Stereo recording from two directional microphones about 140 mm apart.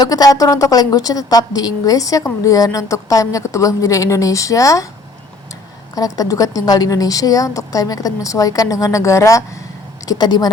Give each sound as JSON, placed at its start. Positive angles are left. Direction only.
{"t": 0.0, "sound": "a woman's voice", "side_deg": 25}
{"t": 5.9, "sound": "a woman's voice", "side_deg": 25}